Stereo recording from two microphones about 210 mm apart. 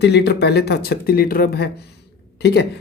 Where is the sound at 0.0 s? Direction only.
55° left (ahead or behind).